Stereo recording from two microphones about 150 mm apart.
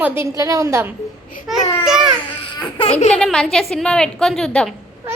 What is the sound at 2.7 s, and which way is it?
Baby laughter, 40° left (ahead or behind).